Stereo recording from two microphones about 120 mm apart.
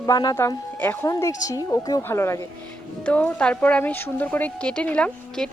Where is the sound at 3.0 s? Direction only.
10° left (ahead or behind).